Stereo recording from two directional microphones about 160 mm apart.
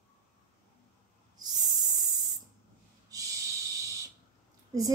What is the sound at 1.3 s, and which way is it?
Hiss, 25° right (ahead or behind).